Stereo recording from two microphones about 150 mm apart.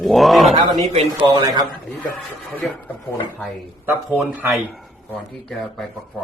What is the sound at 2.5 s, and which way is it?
Speech, 10° left (ahead or behind).